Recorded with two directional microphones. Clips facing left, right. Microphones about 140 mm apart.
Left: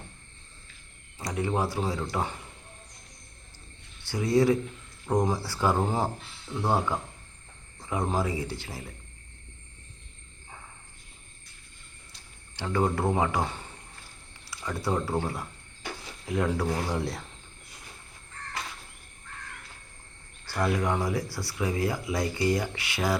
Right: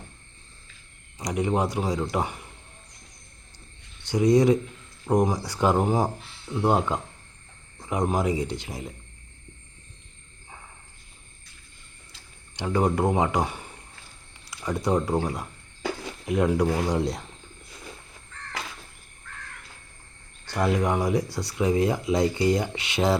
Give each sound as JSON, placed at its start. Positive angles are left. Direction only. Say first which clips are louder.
{"t": 1.2, "sound": "speech", "louder": "right 4 dB", "side_deg": -20}
{"t": 4.0, "sound": "speech", "louder": "right 4 dB", "side_deg": -20}
{"t": 12.5, "sound": "speech", "louder": "right 3 dB", "side_deg": -20}
{"t": 20.4, "sound": "speech", "louder": "right 3 dB", "side_deg": -20}